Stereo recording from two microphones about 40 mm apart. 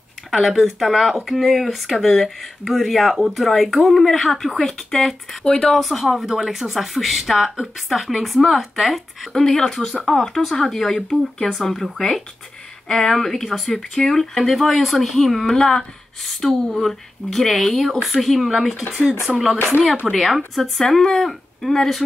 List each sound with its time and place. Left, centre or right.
0.3 s speech: centre
5.4 s speech: centre
5.8 s speech: centre
9.3 s speech: centre